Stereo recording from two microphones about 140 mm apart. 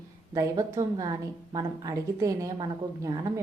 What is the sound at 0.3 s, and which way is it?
A woman's voice, 25° right (ahead or behind).